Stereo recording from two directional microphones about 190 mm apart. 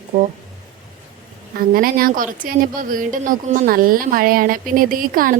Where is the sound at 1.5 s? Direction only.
50° right (ahead or behind).